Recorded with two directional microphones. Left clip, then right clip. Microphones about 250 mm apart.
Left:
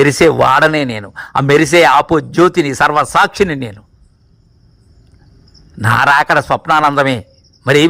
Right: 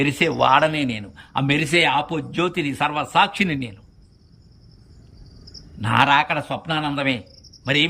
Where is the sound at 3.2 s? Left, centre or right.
Left.